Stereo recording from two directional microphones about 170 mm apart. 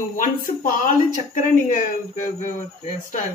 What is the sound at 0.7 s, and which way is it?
Speech, 50° left (ahead or behind).